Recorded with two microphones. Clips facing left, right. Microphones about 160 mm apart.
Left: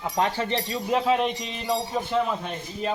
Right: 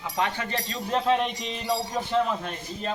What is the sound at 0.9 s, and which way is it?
A man's voice, 5° left (ahead or behind).